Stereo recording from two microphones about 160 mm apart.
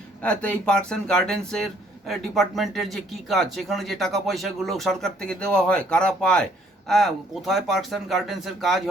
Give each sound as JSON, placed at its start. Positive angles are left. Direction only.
{"t": 0.2, "sound": "speech", "side_deg": 5}